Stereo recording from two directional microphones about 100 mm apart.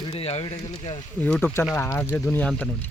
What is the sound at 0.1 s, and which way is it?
Speech, 85° left.